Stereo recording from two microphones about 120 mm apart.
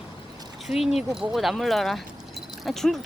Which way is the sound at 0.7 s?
Centre (ahead or behind).